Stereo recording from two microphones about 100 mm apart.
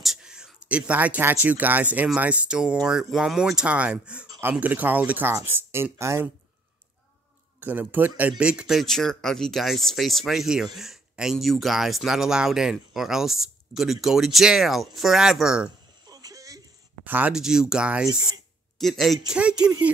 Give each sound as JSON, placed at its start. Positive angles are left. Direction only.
{"t": 0.0, "sound": "speech", "side_deg": -5}
{"t": 7.6, "sound": "speech", "side_deg": -20}
{"t": 16.1, "sound": "a sound", "side_deg": -40}
{"t": 17.0, "sound": "speech", "side_deg": -15}
{"t": 17.3, "sound": "speech", "side_deg": -5}
{"t": 18.8, "sound": "speech", "side_deg": 0}
{"t": 19.3, "sound": "speech", "side_deg": -10}